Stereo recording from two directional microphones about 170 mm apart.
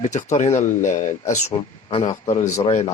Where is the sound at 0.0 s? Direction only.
45° left (ahead or behind).